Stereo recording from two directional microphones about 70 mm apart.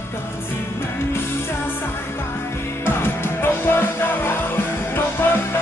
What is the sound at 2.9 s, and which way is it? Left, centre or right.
Music, left.